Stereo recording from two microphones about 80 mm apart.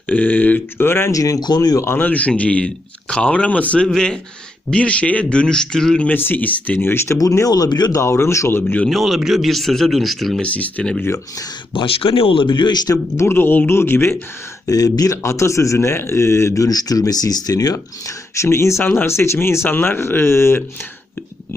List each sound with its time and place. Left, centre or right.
0.1 s speech: left
1.1 s speech: left
1.4 s speech: left
1.8 s speech: left; by 6.1 s centre
6.1 s a man's voice: left
7.2 s speech: left
7.9 s a man's voice: left
8.9 s speech: centre
10.4 s speech: centre
11.7 s speech: left
13.1 s speech: left
14.7 s a man's voice: left